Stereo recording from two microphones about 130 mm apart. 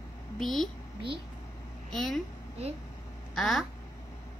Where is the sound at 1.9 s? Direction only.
Centre (ahead or behind).